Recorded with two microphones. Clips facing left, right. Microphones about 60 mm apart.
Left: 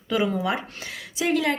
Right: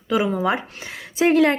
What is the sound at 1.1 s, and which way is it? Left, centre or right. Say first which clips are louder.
Speech: right 7 dB; right.